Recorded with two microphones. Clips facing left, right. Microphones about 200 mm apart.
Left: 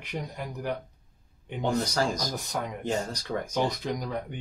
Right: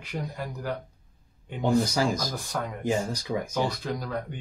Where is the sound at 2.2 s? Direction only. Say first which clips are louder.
Even; 20° left (ahead or behind).